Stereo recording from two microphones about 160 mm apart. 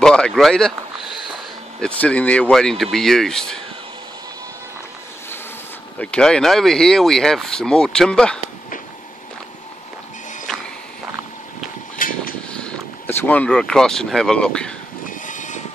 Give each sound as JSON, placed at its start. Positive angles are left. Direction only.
{"t": 0.0, "sound": "speech", "side_deg": 5}
{"t": 1.8, "sound": "speech", "side_deg": 10}
{"t": 5.9, "sound": "speech", "side_deg": 5}
{"t": 12.0, "sound": "vehicle", "side_deg": 60}
{"t": 12.5, "sound": "speech", "side_deg": 10}
{"t": 15.0, "sound": "train", "side_deg": 50}